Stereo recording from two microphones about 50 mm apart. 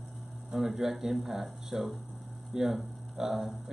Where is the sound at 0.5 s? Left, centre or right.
Centre.